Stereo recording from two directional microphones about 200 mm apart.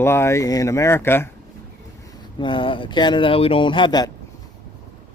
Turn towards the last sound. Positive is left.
turn(degrees=20)  # may be behind; listen again after turning